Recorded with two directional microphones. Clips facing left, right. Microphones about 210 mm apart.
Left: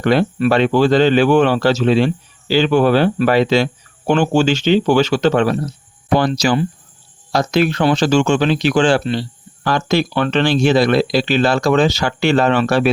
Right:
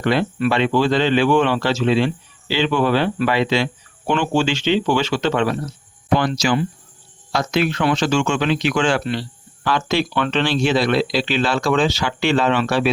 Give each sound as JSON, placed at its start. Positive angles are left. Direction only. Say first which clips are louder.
{"t": 0.0, "sound": "speech", "louder": "left 4 dB", "side_deg": 45}
{"t": 9.6, "sound": "speech", "louder": "left 3 dB", "side_deg": 40}